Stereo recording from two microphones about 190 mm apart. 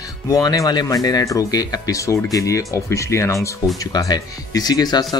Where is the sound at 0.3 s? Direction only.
20° left (ahead or behind).